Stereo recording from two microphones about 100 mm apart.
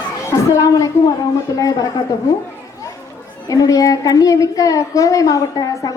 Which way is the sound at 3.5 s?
35° left (ahead or behind).